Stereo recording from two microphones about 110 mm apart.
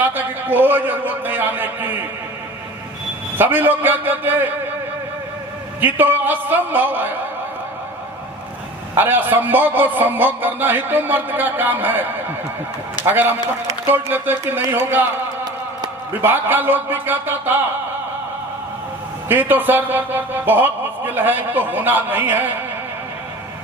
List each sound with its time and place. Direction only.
0.0 s a man's voice: 15° right (ahead or behind)
3.3 s a man's voice: 15° right (ahead or behind)
5.8 s a man's voice: 20° right (ahead or behind)
9.0 s a man's voice: 20° right (ahead or behind)
13.1 s speech: 20° right (ahead or behind)
16.2 s a man's voice: 20° right (ahead or behind)
19.3 s a man's voice: 15° right (ahead or behind)